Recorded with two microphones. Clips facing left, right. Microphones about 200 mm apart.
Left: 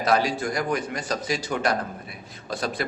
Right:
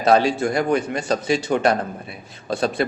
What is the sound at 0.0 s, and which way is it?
Speech, 25° right (ahead or behind).